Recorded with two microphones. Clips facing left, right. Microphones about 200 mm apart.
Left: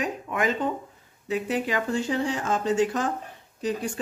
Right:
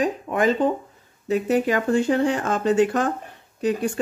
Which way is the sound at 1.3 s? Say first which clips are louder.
Right 6 dB; 45° right (ahead or behind).